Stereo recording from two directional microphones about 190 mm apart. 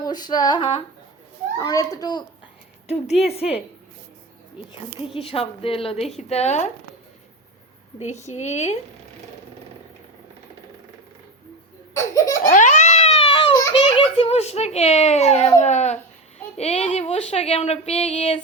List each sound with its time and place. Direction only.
0.0 s a sound: 20° left (ahead or behind)
2.8 s speech: 35° left (ahead or behind)
5.0 s speech: 30° left (ahead or behind)
7.9 s speech: 40° left (ahead or behind)
11.9 s laughter: 15° left (ahead or behind)
12.5 s a sound: 40° left (ahead or behind)
16.6 s speech: 35° left (ahead or behind)